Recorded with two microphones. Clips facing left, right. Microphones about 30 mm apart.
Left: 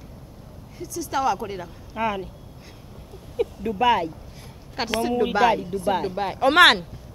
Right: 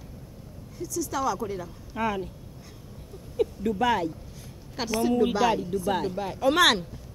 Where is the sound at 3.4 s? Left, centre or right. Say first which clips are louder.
Left 2 dB; centre.